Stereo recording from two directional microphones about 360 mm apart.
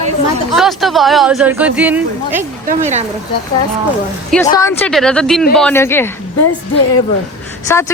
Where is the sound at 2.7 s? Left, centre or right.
Centre.